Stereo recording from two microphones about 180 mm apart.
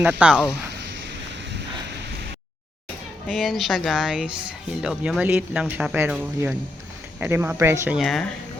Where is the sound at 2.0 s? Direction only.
65° right (ahead or behind).